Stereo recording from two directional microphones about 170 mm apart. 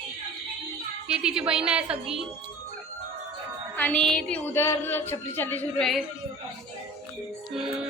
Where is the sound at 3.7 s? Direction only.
10° left (ahead or behind).